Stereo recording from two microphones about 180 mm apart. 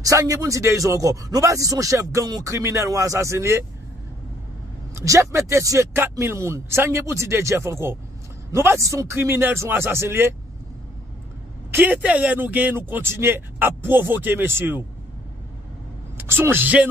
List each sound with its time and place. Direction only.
0.0 s speech: 20° right (ahead or behind)
4.9 s speech: 15° right (ahead or behind)
11.7 s speech: 10° right (ahead or behind)
16.2 s speech: 10° right (ahead or behind)